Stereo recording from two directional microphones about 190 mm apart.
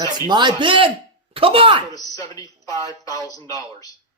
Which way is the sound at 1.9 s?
15° left (ahead or behind).